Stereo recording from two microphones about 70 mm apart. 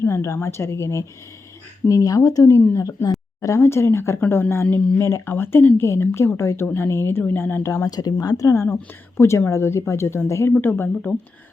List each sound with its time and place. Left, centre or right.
0.0 s speech: left
2.8 s speech: left
5.3 s speech: left
7.6 s speech: left
8.6 s speech: left
10.6 s speech: left